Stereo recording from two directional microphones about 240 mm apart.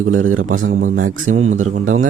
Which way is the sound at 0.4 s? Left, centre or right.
Right.